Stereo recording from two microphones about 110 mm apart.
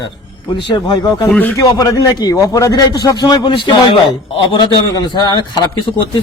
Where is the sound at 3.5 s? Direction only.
55° left (ahead or behind).